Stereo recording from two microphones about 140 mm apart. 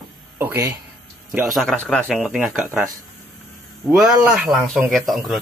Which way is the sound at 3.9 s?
5° right (ahead or behind).